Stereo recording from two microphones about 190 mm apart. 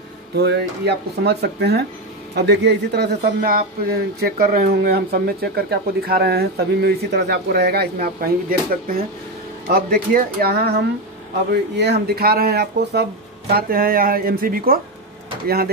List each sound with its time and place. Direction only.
0.4 s speech: 60° right (ahead or behind)
3.2 s speech: 50° right (ahead or behind)